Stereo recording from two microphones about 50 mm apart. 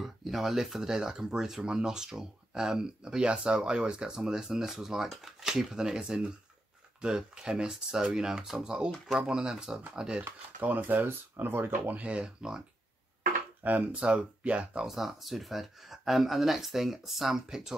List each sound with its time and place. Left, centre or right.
0.0 s speech: centre
10.8 s speech: right
11.9 s speech: right
12.4 s speech: centre
13.7 s speech: right
14.9 s speech: centre